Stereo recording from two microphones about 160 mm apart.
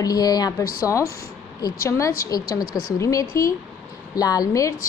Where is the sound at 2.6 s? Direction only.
70° left (ahead or behind).